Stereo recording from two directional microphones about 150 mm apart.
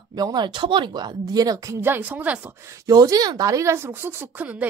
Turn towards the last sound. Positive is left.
turn(degrees=-10)  # may be behind; listen again after turning